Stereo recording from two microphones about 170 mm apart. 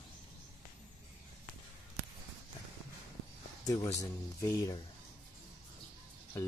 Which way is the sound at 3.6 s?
20° left (ahead or behind).